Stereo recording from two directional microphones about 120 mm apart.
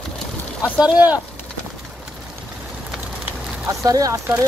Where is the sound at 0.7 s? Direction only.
10° right (ahead or behind).